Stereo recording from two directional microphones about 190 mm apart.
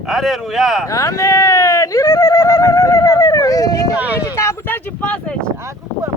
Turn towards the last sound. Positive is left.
turn(degrees=-15)  # may be behind; listen again after turning